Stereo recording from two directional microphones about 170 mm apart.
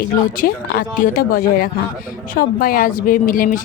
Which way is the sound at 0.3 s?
60° left (ahead or behind).